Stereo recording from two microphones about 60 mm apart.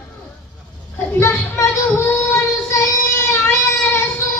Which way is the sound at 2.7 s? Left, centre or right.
Left.